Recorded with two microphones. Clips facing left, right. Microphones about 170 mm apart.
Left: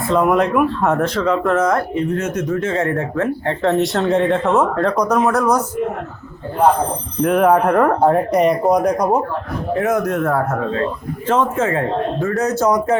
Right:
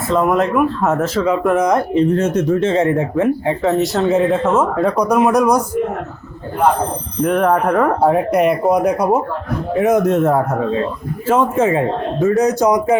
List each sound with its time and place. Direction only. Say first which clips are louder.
0.1 s speech: even; centre (ahead or behind)
2.0 s speech: right 5 dB; 30° right (ahead or behind)
3.6 s speech: left 2 dB; centre (ahead or behind)
7.2 s speech: left 1 dB; centre (ahead or behind)
9.7 s speech: right 4 dB; 20° right (ahead or behind)